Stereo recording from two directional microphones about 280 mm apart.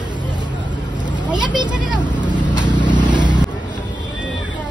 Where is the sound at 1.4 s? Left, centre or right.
Centre.